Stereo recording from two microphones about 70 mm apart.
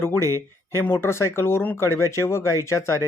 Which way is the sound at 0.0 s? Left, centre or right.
Left.